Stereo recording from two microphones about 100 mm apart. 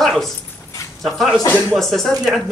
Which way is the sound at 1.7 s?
Centre (ahead or behind).